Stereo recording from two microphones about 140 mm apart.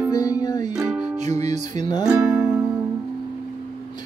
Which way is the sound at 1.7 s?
30° left (ahead or behind).